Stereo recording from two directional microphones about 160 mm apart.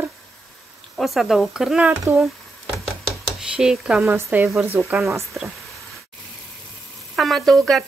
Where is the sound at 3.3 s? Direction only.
5° right (ahead or behind).